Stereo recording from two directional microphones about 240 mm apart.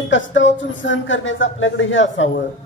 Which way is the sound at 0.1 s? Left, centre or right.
Left.